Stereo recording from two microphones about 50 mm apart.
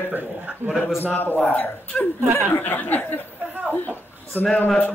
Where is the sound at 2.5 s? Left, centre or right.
Left.